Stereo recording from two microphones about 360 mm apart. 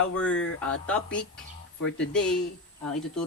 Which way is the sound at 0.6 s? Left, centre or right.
Centre.